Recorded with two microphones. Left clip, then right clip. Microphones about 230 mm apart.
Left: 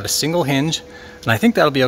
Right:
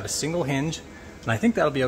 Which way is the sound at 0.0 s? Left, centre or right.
Left.